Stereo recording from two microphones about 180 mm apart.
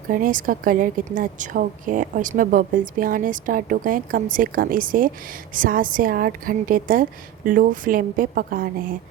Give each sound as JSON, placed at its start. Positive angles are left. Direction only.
{"t": 0.1, "sound": "a woman's voice", "side_deg": -50}